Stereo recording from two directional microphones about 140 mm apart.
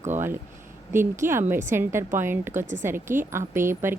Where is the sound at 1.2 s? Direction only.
75° right (ahead or behind).